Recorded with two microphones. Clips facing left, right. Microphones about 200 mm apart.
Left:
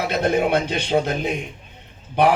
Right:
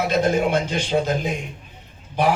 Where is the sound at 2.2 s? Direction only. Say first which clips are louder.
Left 3 dB; 60° left (ahead or behind).